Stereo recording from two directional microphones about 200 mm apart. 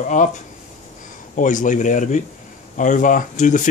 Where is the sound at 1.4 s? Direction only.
40° left (ahead or behind).